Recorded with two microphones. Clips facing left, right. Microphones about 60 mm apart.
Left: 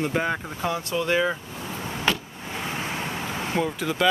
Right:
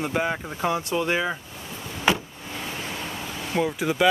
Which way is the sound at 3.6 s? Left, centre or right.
Centre.